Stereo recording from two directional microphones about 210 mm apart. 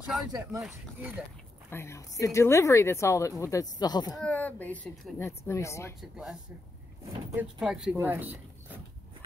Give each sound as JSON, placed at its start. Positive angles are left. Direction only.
{"t": 0.3, "sound": "speech", "side_deg": -15}
{"t": 0.6, "sound": "speech", "side_deg": -5}
{"t": 1.7, "sound": "speech", "side_deg": 10}
{"t": 4.2, "sound": "speech", "side_deg": 5}
{"t": 5.9, "sound": "speech", "side_deg": 0}